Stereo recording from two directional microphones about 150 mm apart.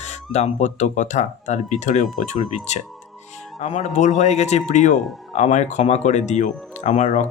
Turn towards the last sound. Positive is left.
turn(degrees=50)  # may be behind; listen again after turning